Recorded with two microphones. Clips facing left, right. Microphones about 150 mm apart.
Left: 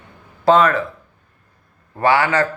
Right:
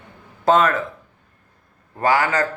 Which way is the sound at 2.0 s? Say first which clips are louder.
Left 3 dB; 40° right (ahead or behind).